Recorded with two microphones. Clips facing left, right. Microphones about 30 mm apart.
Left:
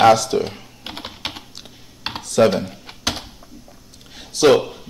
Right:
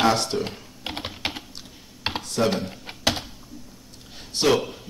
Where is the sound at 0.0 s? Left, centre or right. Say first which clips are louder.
Left 8 dB; left.